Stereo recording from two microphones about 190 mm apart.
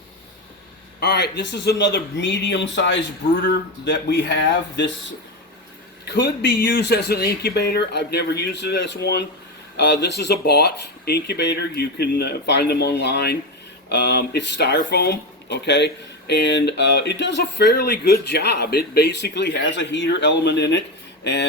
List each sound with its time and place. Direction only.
0.9 s a man's voice: 60° left (ahead or behind)